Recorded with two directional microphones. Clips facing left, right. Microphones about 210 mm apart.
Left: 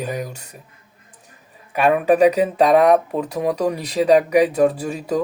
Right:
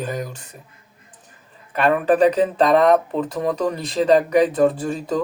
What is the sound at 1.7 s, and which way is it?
Speech, 10° left (ahead or behind).